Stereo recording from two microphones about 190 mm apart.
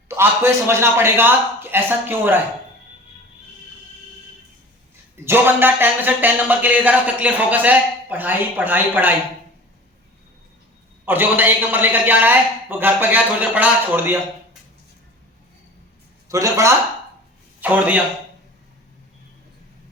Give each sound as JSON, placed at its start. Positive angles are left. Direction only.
{"t": 0.2, "sound": "speech", "side_deg": -10}
{"t": 5.1, "sound": "speech", "side_deg": -10}
{"t": 11.0, "sound": "speech", "side_deg": -10}
{"t": 16.3, "sound": "a man's voice", "side_deg": -15}